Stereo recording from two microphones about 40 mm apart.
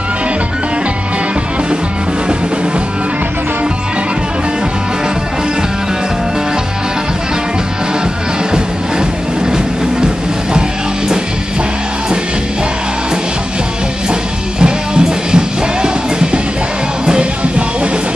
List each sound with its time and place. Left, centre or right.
14.6 s music: right